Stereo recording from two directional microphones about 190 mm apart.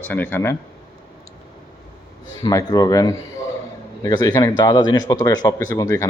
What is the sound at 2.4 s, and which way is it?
Speech, 20° left (ahead or behind).